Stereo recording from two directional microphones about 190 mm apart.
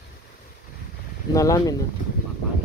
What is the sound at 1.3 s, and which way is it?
Speech, 15° left (ahead or behind).